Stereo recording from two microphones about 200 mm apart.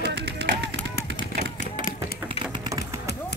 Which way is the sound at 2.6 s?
20° right (ahead or behind).